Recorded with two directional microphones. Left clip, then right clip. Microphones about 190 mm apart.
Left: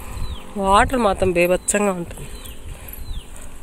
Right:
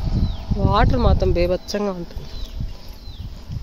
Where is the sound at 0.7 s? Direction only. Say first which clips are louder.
Left 4 dB; 5° right (ahead or behind).